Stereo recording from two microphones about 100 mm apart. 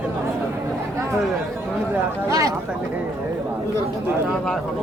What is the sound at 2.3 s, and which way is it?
Speech, 35° right (ahead or behind).